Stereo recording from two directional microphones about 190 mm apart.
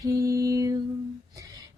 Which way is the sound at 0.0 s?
15° right (ahead or behind).